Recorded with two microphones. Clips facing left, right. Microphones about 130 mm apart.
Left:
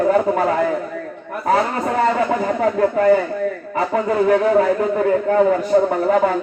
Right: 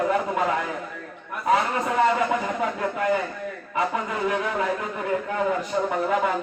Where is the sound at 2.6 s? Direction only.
40° left (ahead or behind).